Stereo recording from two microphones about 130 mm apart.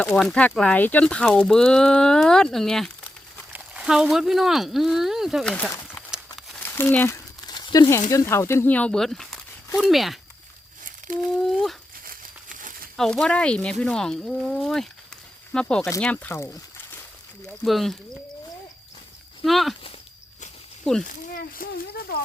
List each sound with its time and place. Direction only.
0.0 s speech: 5° left (ahead or behind)
5.5 s speech: 10° left (ahead or behind)
6.6 s speech: 20° left (ahead or behind)
7.4 s a sound: 30° left (ahead or behind)
8.1 s speech: 20° left (ahead or behind); by 10.2 s centre (ahead or behind)
11.3 s speech: centre (ahead or behind)
12.0 s crumpling: 90° right
13.0 s speech: 5° left (ahead or behind)
15.6 s speech: 20° left (ahead or behind)
17.6 s speech: centre (ahead or behind)
19.5 s speech: centre (ahead or behind)
21.1 s speech: 90° left